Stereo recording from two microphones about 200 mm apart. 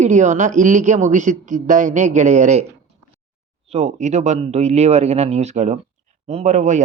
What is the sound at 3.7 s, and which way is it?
Speech, 35° right (ahead or behind).